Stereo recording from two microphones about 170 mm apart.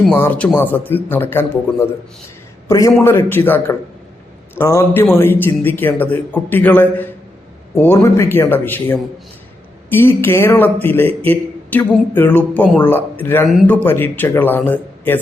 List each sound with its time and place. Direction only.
0.1 s a man's voice: 10° left (ahead or behind)